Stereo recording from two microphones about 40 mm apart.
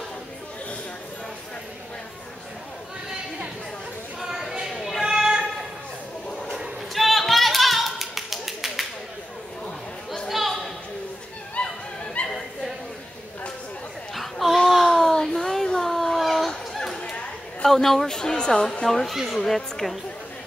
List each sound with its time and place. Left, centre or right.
4.3 s a sound: centre
6.9 s clapping: centre
10.1 s a sound: centre
11.6 s a sound: left
12.2 s dog: left
14.1 s a sound: centre
15.8 s fowl: centre
16.2 s turkey: centre
16.4 s chatter: centre
17.0 s chatter: left
17.6 s speech: centre
18.9 s speech: centre